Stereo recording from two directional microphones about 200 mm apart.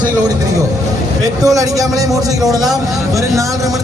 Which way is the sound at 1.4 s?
15° right (ahead or behind).